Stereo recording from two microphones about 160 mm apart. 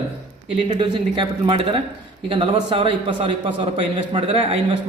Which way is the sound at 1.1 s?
30° right (ahead or behind).